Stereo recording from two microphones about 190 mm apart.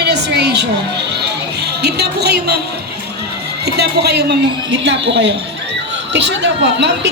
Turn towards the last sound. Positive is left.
turn(degrees=-65)  # may be behind; listen again after turning